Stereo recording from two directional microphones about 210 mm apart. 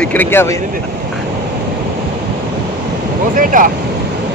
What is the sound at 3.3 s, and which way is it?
Speech, 40° right (ahead or behind).